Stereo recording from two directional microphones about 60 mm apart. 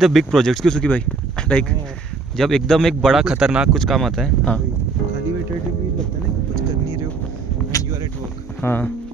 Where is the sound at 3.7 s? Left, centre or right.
Centre.